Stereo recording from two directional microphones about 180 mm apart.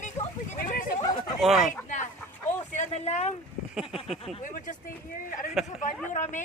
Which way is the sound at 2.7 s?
40° left (ahead or behind).